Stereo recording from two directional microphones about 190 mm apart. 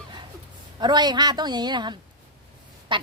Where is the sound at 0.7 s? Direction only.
20° right (ahead or behind).